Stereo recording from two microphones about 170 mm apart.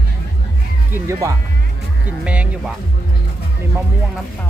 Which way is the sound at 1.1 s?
20° right (ahead or behind).